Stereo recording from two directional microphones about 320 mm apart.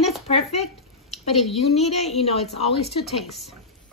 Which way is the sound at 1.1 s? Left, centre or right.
Centre.